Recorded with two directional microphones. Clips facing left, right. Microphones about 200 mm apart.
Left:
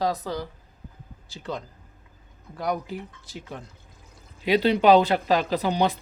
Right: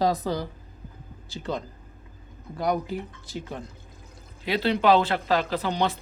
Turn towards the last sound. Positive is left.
turn(degrees=15)  # may be behind; listen again after turning